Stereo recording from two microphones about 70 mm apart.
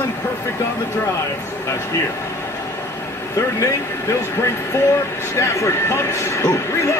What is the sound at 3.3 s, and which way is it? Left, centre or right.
Speech, left.